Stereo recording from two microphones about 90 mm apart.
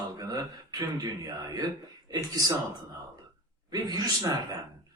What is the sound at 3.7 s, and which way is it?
Speech, 50° right (ahead or behind).